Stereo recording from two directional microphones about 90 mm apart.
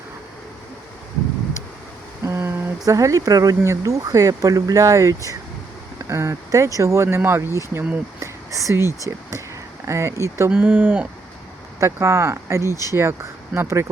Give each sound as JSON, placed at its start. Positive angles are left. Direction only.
{"t": 2.2, "sound": "a sound", "side_deg": -30}
{"t": 2.8, "sound": "speech", "side_deg": -40}
{"t": 8.2, "sound": "whispering", "side_deg": -35}
{"t": 9.8, "sound": "speech", "side_deg": -30}
{"t": 10.5, "sound": "speech", "side_deg": -20}
{"t": 11.8, "sound": "speech", "side_deg": -30}